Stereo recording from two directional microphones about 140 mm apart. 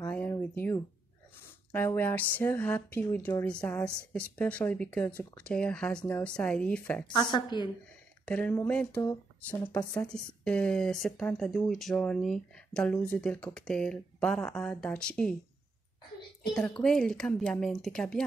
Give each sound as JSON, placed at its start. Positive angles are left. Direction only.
{"t": 0.0, "sound": "a sound", "side_deg": 15}
{"t": 1.7, "sound": "speech", "side_deg": 15}
{"t": 7.1, "sound": "a woman's voice", "side_deg": 30}
{"t": 8.3, "sound": "speech", "side_deg": 10}
{"t": 16.8, "sound": "speech", "side_deg": 5}